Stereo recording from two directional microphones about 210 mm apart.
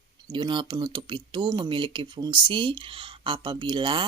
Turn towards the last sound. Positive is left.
turn(degrees=-25)  # may be behind; listen again after turning